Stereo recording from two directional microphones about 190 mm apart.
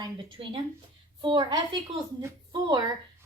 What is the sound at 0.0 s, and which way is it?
A woman's voice, 25° right (ahead or behind).